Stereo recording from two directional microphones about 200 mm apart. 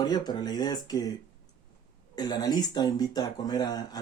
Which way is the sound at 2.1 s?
20° left (ahead or behind).